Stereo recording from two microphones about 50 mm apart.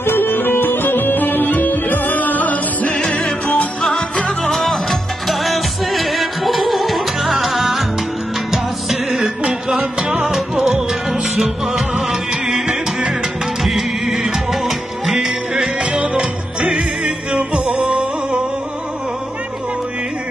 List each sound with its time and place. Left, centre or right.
0.0 s music: left
3.0 s music: centre
15.8 s music: centre